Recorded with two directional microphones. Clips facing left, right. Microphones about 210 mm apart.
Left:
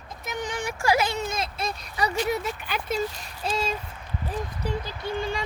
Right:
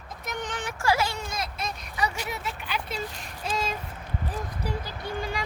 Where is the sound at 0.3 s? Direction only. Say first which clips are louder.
Left 3 dB; 10° left (ahead or behind); by 2.1 s 35° left (ahead or behind).